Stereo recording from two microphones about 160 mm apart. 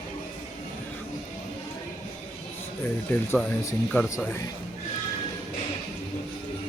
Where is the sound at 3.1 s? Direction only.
15° left (ahead or behind).